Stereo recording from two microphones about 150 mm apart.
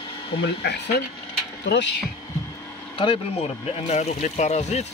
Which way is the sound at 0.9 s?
90° left.